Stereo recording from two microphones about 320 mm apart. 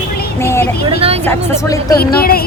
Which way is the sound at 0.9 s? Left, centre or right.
Centre.